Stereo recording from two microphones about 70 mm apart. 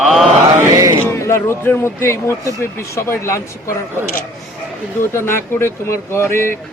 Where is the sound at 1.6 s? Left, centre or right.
Left.